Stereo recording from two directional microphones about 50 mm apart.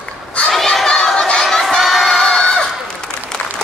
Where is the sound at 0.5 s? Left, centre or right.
Centre.